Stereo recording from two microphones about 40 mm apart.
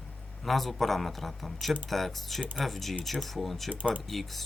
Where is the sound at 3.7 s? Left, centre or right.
Right.